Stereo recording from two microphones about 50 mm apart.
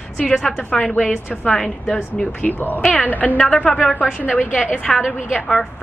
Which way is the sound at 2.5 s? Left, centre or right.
Left.